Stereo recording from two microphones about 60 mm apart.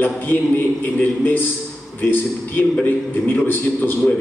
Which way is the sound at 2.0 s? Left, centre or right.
Left.